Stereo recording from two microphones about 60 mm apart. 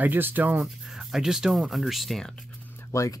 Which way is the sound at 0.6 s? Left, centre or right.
Centre.